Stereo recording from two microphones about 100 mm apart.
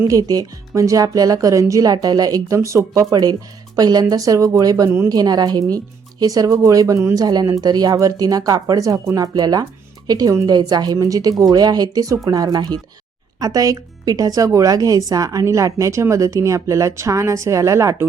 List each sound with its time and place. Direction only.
0.1 s speech: 40° right (ahead or behind)